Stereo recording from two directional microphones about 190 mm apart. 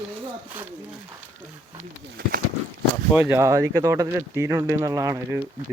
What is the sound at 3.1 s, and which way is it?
Speech, 10° right (ahead or behind).